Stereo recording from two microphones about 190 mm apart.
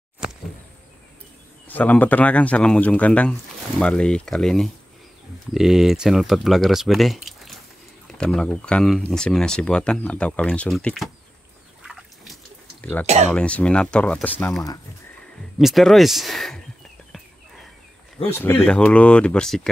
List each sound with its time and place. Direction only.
1.7 s speech: 10° left (ahead or behind)
11.8 s a sound: centre (ahead or behind)
13.0 s speech: 35° right (ahead or behind)
13.3 s speech: 5° left (ahead or behind)
15.6 s speech: centre (ahead or behind)
18.2 s speech: 10° left (ahead or behind)